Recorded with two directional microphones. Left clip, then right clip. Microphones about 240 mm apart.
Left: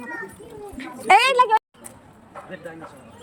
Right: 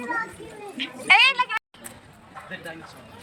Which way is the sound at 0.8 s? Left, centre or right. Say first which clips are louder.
Left 1 dB; left.